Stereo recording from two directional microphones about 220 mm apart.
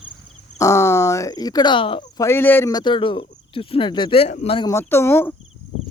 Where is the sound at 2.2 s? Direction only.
10° left (ahead or behind).